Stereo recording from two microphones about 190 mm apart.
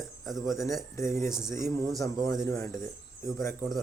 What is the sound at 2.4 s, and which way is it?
Speech, 15° left (ahead or behind).